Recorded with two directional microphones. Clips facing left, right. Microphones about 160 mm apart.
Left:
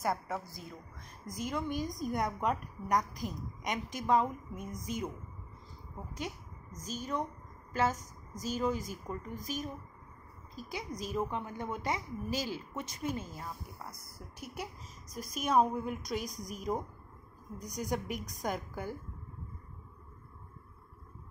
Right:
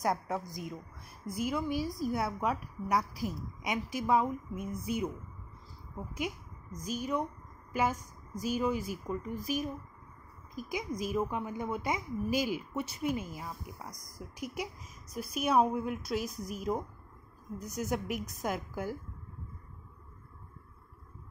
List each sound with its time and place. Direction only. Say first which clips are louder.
0.5 s a woman's voice: right 6 dB; 15° right (ahead or behind)
6.1 s a woman's voice: right 4 dB; 10° right (ahead or behind)